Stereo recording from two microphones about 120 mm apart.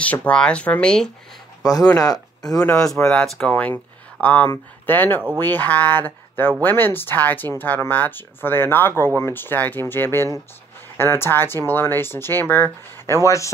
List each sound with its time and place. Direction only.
0.0 s speech: 10° left (ahead or behind)
2.6 s speech: 5° left (ahead or behind)
3.7 s a sound: 15° left (ahead or behind)
4.8 s speech: 15° left (ahead or behind)